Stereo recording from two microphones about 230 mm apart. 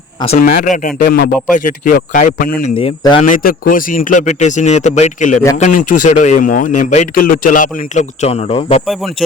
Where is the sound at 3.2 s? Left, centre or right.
Left.